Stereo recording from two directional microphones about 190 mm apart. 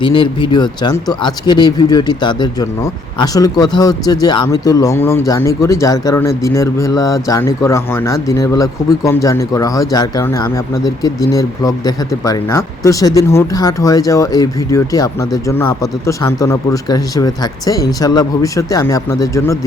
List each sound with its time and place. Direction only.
0.0 s speech: 25° left (ahead or behind)